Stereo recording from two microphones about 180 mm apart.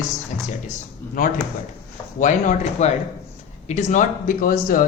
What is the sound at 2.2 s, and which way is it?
Speech, 45° left (ahead or behind).